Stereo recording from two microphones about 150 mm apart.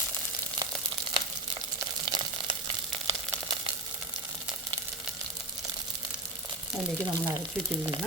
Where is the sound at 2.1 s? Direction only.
30° right (ahead or behind).